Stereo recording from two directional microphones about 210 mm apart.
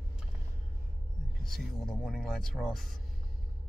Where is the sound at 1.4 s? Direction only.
5° left (ahead or behind).